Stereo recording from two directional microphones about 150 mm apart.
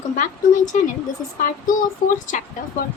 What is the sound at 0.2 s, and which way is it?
Speech, 60° left (ahead or behind).